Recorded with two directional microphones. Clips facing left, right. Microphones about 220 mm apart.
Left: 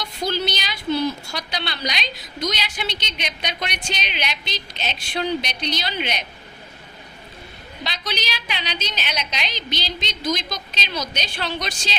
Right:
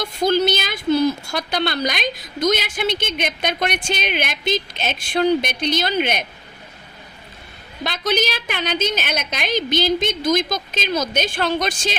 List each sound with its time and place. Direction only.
0.0 s a woman's voice: 50° right (ahead or behind)
7.9 s a woman's voice: 50° right (ahead or behind)